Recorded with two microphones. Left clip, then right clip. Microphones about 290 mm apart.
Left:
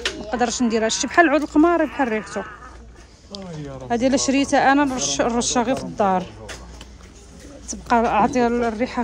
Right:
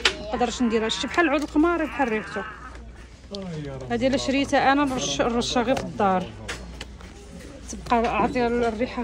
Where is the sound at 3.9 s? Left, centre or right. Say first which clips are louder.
Left 4 dB; centre.